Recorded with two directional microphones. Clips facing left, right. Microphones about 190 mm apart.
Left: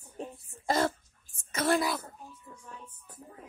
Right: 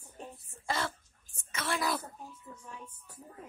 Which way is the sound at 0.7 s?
40° left (ahead or behind).